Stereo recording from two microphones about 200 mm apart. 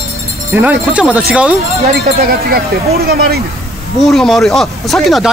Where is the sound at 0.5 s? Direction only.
5° right (ahead or behind).